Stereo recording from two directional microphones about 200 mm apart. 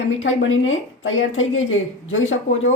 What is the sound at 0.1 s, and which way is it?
A woman's voice, 75° left (ahead or behind).